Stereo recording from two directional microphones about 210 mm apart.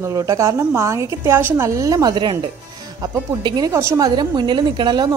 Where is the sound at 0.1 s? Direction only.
15° right (ahead or behind).